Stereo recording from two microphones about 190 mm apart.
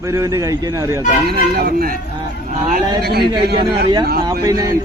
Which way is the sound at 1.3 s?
55° right (ahead or behind).